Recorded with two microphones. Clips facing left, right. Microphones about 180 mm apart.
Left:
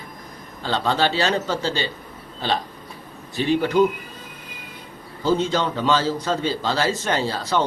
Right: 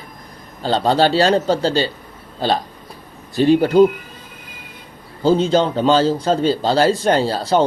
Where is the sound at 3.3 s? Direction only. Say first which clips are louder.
Right 7 dB; 35° right (ahead or behind).